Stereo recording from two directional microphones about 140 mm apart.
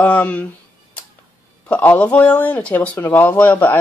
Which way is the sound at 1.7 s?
10° left (ahead or behind).